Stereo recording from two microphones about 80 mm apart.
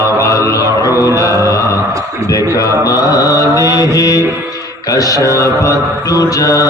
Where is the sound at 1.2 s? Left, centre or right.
Left.